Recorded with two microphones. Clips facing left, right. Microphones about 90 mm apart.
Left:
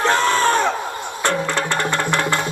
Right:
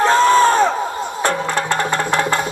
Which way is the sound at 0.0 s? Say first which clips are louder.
Right 5 dB; 20° right (ahead or behind).